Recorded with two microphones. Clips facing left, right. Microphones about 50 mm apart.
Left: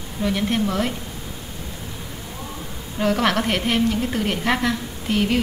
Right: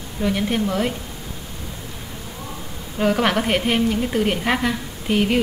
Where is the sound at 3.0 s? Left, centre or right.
Centre.